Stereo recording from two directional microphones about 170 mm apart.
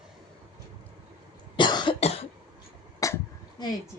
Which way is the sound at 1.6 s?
25° left (ahead or behind).